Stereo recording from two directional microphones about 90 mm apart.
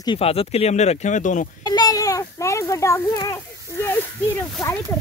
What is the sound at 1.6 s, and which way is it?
A child's voice, 45° left (ahead or behind).